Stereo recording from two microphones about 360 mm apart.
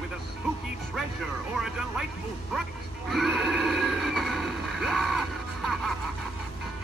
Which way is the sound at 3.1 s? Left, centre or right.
Centre.